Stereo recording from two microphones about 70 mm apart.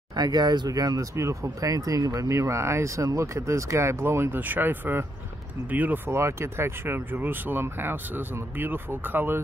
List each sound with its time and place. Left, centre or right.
0.1 s speech: right
6.0 s speech: right